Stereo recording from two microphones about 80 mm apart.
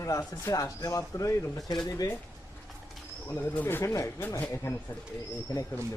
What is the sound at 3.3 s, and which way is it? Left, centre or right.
Speech, left.